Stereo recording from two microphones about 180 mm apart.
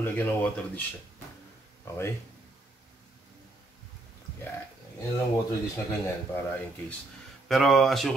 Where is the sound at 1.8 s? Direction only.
15° left (ahead or behind).